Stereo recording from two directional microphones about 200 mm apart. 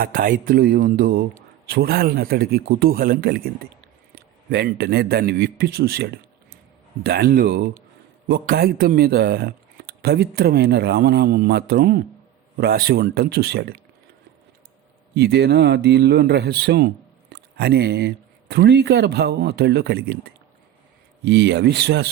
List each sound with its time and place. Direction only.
0.0 s a man's voice: 45° right (ahead or behind)
15.1 s speech: 55° right (ahead or behind)
21.2 s speech: 55° right (ahead or behind)